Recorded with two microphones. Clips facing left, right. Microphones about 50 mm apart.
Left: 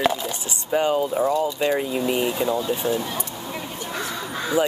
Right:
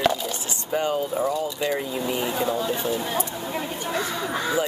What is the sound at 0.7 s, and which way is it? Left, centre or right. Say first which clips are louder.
Speech: left 4 dB; left.